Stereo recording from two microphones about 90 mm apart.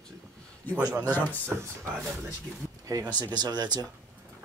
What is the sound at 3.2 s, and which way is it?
Speech, 50° right (ahead or behind).